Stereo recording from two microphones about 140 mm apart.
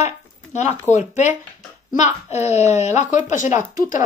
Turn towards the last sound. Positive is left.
turn(degrees=70)  # may be behind; listen again after turning